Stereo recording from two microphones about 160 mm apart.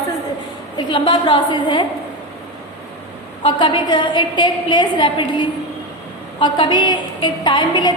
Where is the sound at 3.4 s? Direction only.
30° left (ahead or behind).